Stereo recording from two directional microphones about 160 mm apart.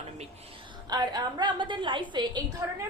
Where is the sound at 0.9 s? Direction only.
25° right (ahead or behind).